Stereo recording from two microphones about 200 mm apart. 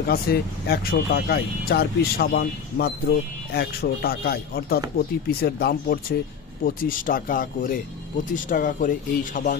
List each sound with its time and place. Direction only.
0.1 s speech: 50° left (ahead or behind)